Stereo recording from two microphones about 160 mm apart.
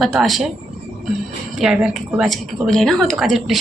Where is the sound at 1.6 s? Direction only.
5° right (ahead or behind).